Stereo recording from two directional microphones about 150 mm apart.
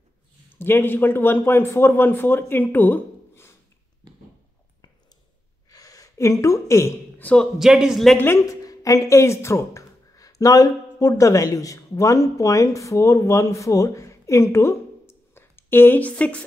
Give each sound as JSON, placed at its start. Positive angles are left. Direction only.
{"t": 0.5, "sound": "a man's voice", "side_deg": 15}
{"t": 5.7, "sound": "a woman's voice", "side_deg": 25}
{"t": 7.5, "sound": "a man's voice", "side_deg": -5}
{"t": 8.2, "sound": "speech", "side_deg": 20}